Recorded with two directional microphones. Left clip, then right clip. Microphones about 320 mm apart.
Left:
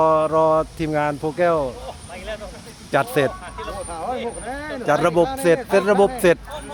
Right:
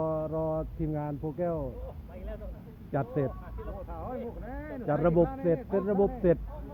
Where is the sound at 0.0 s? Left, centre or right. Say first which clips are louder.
Left 15 dB; left.